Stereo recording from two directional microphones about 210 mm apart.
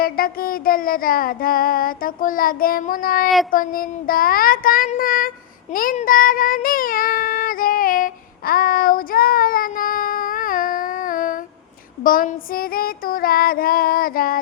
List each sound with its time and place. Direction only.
0.0 s child singing: 45° left (ahead or behind)